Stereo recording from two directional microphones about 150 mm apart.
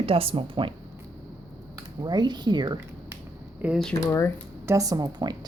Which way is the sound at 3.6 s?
10° right (ahead or behind).